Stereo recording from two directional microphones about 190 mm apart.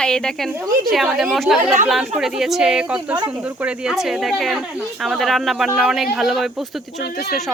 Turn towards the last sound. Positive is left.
turn(degrees=55)  # may be behind; listen again after turning